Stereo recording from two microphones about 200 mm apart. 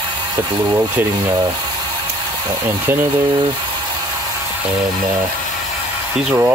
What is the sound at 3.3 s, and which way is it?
Speech, 25° right (ahead or behind).